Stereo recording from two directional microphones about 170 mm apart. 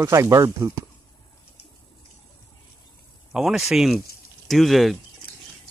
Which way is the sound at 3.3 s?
5° right (ahead or behind).